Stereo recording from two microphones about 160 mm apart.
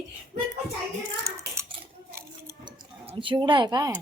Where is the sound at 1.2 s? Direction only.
20° right (ahead or behind).